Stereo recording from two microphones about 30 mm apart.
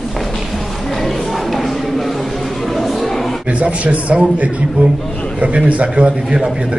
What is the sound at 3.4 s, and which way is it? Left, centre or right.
A man's voice, right.